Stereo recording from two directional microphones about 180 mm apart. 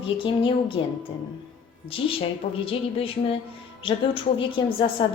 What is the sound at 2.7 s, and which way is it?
A woman's voice, 30° left (ahead or behind).